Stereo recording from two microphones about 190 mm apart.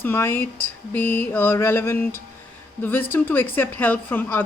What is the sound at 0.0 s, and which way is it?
A woman's voice, 10° left (ahead or behind).